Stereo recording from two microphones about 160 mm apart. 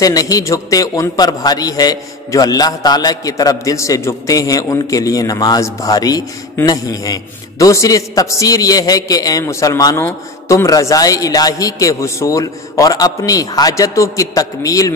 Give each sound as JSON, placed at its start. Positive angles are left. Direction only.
{"t": 0.0, "sound": "a man's voice", "side_deg": 20}